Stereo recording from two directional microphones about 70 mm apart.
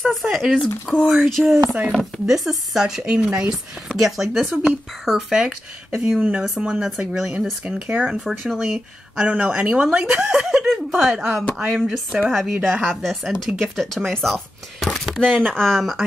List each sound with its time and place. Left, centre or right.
0.0 s speech: centre
0.6 s speech: centre
1.0 s speech: centre
6.4 s speech: centre
6.7 s speech: centre
10.4 s speech: centre